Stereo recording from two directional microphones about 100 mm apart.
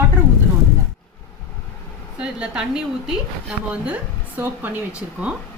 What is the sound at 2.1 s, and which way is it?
A woman's voice, 10° right (ahead or behind).